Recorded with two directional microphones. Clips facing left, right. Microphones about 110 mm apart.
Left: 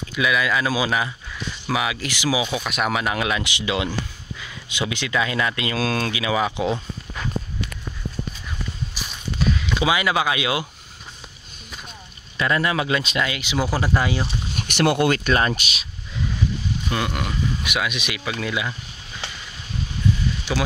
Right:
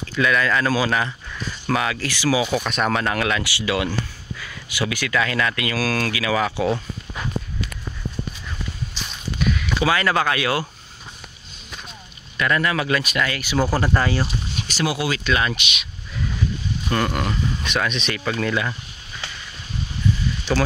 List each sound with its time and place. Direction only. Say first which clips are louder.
0.1 s speech: right 2 dB; 10° left (ahead or behind)
2.4 s speech: right 2 dB; centre (ahead or behind); by 6.8 s 20° left (ahead or behind)
9.0 s a sound: right 1 dB; 10° left (ahead or behind)
9.4 s walk: even; 30° left (ahead or behind)
9.8 s speech: right 1 dB; 15° left (ahead or behind)
12.4 s speech: even; 25° left (ahead or behind)
14.7 s speech: left 5 dB; 60° left (ahead or behind); by 15.9 s 35° left (ahead or behind)
16.9 s speech: right 4 dB; 5° left (ahead or behind)